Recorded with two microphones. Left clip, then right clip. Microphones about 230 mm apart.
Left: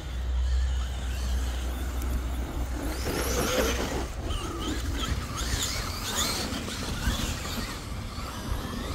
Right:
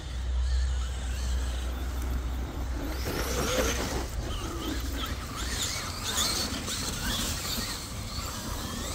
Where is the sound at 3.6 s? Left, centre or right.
Centre.